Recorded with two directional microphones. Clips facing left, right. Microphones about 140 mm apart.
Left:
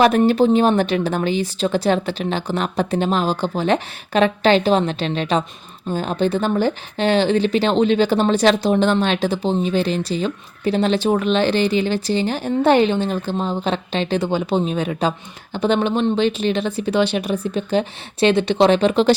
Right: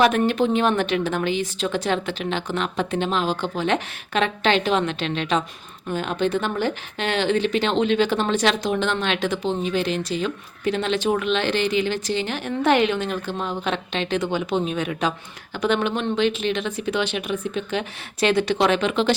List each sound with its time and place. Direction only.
0.0 s speech: 35° left (ahead or behind)